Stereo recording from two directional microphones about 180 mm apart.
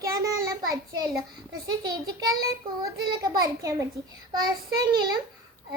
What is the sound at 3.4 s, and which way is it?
Speech, 20° right (ahead or behind).